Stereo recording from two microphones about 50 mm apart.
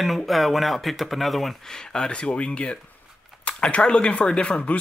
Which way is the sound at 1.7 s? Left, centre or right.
Centre.